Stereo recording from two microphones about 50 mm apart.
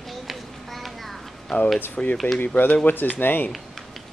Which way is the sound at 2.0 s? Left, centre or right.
Left.